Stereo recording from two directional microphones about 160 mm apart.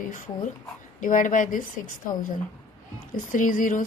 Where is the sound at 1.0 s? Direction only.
55° left (ahead or behind).